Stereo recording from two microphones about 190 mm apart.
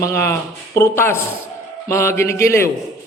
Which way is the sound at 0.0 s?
15° left (ahead or behind).